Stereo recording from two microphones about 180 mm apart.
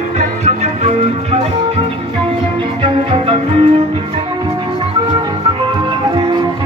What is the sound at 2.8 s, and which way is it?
Cello, 30° right (ahead or behind).